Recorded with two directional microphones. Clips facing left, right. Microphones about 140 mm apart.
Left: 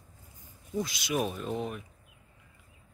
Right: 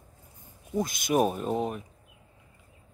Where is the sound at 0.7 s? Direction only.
50° right (ahead or behind).